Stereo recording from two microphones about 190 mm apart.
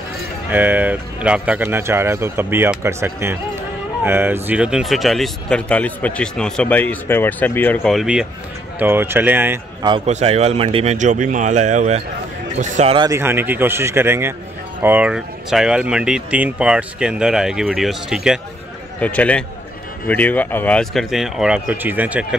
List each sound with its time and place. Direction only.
0.5 s speech: 10° right (ahead or behind)
9.8 s a man's voice: 25° right (ahead or behind)
10.0 s speech: 35° right (ahead or behind)
12.9 s speech: 20° right (ahead or behind)
13.2 s a man's voice: 10° right (ahead or behind)